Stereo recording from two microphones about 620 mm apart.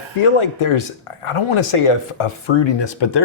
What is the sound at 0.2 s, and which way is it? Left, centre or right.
Speech, left.